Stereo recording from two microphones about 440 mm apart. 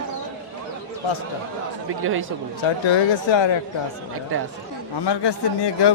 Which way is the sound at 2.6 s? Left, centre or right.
Left.